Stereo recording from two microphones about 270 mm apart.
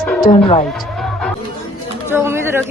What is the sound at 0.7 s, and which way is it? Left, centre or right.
Music, centre.